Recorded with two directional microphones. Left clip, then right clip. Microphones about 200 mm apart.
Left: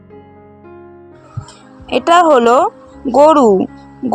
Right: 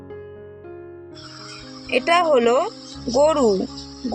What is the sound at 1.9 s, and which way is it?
Speech, 35° left (ahead or behind).